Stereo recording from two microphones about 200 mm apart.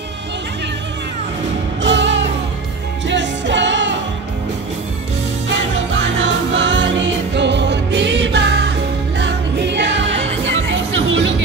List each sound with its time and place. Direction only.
1.8 s music: 65° right (ahead or behind)
5.5 s music: 65° right (ahead or behind)